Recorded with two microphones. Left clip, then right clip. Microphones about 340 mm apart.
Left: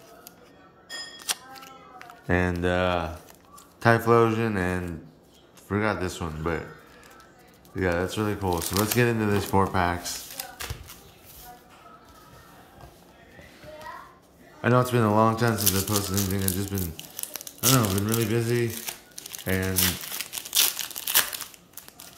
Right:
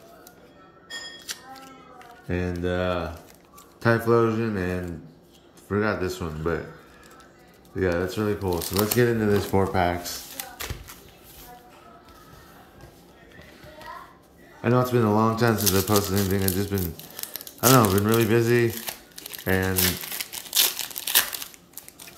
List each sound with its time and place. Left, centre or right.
2.2 s speech: centre
7.7 s speech: centre
14.6 s speech: centre
17.2 s crumpling: centre